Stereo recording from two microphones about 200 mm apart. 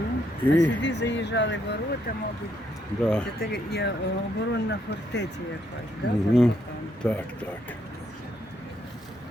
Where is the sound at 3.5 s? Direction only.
55° left (ahead or behind).